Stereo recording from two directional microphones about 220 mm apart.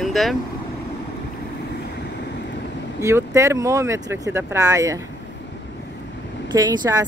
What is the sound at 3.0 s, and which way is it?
Speech, 15° right (ahead or behind).